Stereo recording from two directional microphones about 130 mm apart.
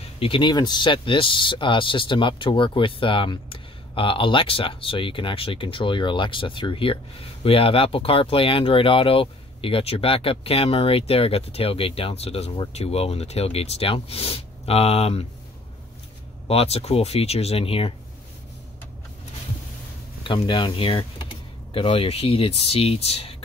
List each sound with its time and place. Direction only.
0.2 s speech: 40° left (ahead or behind)
16.4 s speech: 50° left (ahead or behind)
20.4 s speech: 40° left (ahead or behind)